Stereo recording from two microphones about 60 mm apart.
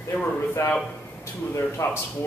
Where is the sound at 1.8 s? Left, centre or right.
Left.